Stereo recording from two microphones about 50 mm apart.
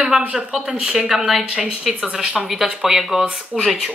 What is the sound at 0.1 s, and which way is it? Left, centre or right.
Speech, centre.